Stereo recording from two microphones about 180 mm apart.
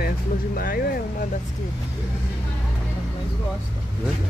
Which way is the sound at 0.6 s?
55° left (ahead or behind).